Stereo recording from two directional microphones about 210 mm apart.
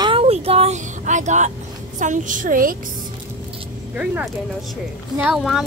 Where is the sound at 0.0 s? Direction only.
25° right (ahead or behind).